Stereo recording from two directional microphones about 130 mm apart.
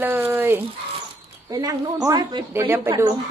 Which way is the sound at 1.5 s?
30° right (ahead or behind).